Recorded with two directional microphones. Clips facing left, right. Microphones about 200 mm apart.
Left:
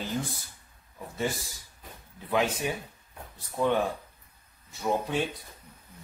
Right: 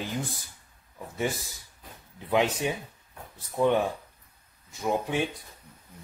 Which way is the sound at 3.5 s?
15° right (ahead or behind).